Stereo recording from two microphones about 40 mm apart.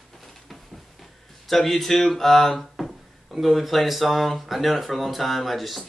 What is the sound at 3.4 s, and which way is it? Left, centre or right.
Speech, centre.